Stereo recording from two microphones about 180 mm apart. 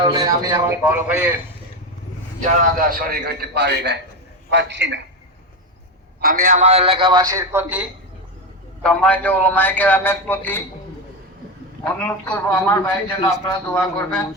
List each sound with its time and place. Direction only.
0.0 s a man's voice: 20° right (ahead or behind)
2.7 s a man's voice: 55° right (ahead or behind); by 4.9 s 80° right
6.1 s a man's voice: 55° right (ahead or behind); by 7.9 s 10° right (ahead or behind)
8.8 s a man's voice: 5° left (ahead or behind)
11.8 s a man's voice: 10° left (ahead or behind)